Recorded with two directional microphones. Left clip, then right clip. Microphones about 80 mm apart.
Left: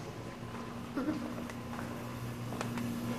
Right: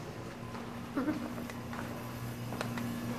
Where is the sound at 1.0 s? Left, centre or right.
Right.